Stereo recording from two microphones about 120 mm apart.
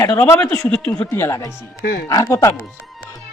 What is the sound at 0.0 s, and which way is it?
Speech, 25° left (ahead or behind).